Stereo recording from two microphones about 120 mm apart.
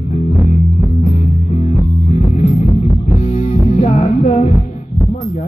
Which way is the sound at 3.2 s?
65° left (ahead or behind).